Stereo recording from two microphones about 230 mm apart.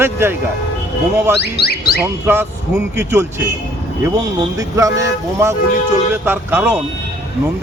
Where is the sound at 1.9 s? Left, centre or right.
Centre.